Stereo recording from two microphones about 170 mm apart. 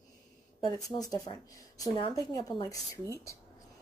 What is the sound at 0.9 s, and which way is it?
A woman's voice, 25° left (ahead or behind).